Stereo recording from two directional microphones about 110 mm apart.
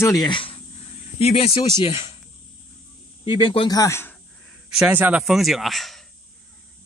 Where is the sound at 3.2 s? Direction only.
50° left (ahead or behind).